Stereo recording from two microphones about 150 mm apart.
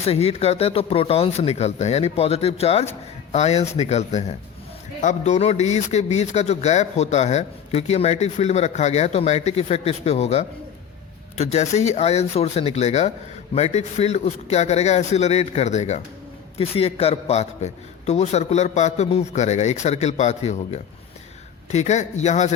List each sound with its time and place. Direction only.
0.0 s speech: 45° left (ahead or behind)